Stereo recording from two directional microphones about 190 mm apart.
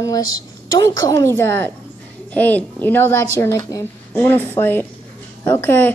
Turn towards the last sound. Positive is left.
turn(degrees=10)  # may be behind; listen again after turning